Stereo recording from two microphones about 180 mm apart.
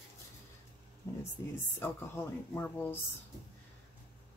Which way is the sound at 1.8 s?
10° left (ahead or behind).